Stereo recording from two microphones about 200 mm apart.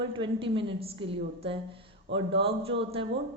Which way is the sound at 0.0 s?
25° right (ahead or behind).